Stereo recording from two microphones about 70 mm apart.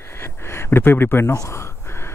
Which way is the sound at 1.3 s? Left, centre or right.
Left.